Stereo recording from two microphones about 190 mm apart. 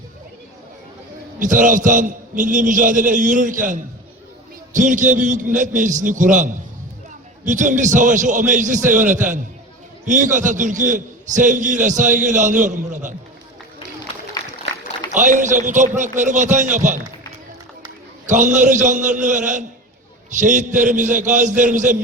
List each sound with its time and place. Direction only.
1.4 s a man's voice: 45° right (ahead or behind)
15.1 s a man's voice: 40° right (ahead or behind)
18.3 s a man's voice: 40° right (ahead or behind)